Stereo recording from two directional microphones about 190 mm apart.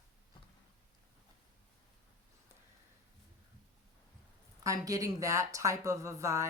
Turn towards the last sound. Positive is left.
turn(degrees=-15)  # may be behind; listen again after turning